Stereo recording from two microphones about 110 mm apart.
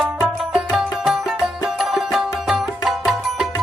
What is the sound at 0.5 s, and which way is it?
Music, 5° right (ahead or behind).